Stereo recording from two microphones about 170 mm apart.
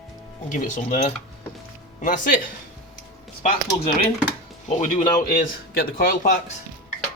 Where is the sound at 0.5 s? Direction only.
50° left (ahead or behind).